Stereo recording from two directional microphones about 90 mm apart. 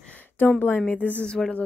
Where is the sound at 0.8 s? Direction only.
15° left (ahead or behind).